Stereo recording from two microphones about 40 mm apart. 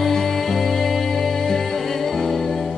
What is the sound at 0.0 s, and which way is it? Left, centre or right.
Music, centre.